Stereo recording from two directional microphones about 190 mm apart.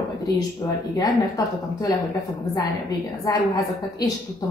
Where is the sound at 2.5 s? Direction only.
20° left (ahead or behind).